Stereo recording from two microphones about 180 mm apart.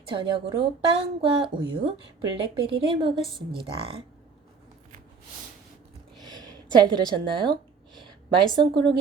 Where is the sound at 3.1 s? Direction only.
Centre (ahead or behind).